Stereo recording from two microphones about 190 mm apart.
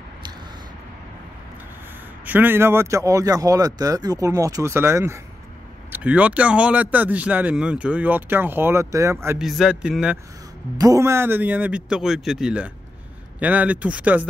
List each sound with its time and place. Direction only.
2.2 s speech: 10° right (ahead or behind)
9.4 s a man's voice: centre (ahead or behind)
10.8 s speech: 15° right (ahead or behind)